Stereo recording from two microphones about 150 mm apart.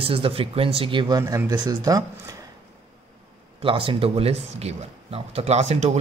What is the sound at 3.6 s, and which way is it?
Speech, 35° right (ahead or behind).